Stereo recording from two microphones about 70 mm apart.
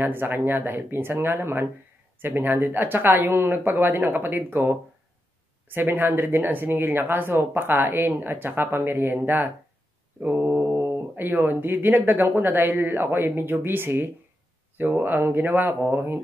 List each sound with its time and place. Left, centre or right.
0.0 s speech: right